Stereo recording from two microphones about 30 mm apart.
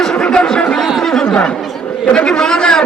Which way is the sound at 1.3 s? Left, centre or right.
Left.